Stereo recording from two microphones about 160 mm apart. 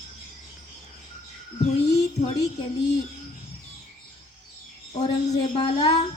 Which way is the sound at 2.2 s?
40° left (ahead or behind).